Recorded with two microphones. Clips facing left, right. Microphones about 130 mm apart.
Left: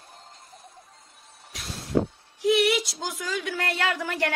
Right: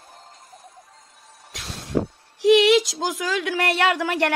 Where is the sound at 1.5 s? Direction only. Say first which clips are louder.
Right 1 dB; 85° right.